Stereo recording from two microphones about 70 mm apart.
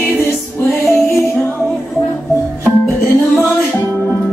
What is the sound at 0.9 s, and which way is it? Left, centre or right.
Music, left.